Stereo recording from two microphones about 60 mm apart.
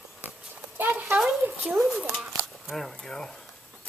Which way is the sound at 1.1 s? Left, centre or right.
Right.